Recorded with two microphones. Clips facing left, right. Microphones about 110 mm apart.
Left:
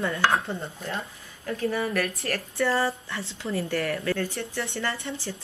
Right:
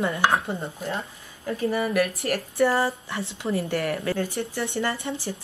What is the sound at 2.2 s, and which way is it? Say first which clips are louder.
Dishes: right 5 dB; 25° right (ahead or behind).